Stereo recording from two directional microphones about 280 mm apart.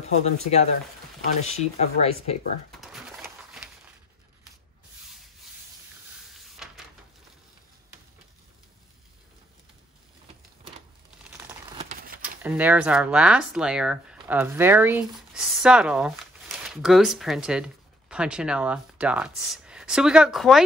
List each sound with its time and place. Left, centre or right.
0.0 s speech: left
2.8 s pigeon: centre
6.2 s a sound: centre
11.2 s crumpling: centre
11.8 s horse: right
12.2 s speech: centre